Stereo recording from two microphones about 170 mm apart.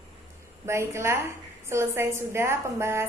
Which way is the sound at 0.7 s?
15° right (ahead or behind).